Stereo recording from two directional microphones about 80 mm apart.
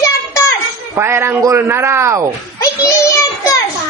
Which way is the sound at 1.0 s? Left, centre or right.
Right.